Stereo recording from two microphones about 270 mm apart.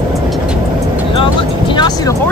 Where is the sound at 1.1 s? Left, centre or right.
Centre.